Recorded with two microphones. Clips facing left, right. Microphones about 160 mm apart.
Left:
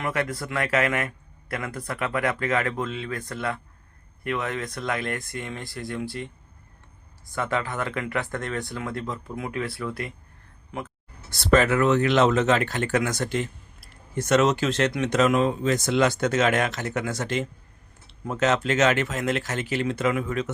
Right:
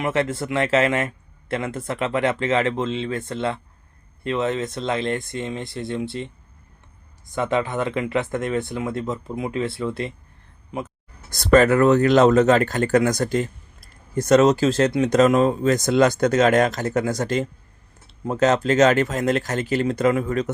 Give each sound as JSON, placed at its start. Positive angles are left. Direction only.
{"t": 0.0, "sound": "a man's voice", "side_deg": -25}
{"t": 7.3, "sound": "a man's voice", "side_deg": -20}
{"t": 10.7, "sound": "a sound", "side_deg": -20}
{"t": 11.3, "sound": "speech", "side_deg": -40}